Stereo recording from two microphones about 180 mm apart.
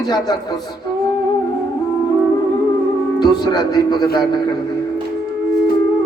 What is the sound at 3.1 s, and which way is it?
Speech, 25° left (ahead or behind).